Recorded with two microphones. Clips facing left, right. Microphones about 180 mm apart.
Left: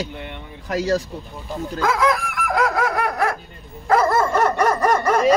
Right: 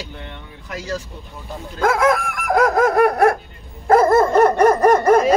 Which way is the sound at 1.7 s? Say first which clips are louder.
Right 3 dB; 50° right (ahead or behind).